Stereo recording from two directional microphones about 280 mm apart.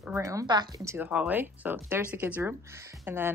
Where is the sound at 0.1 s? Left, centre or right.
Centre.